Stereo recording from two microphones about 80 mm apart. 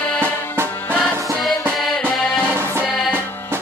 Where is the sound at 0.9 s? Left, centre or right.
Centre.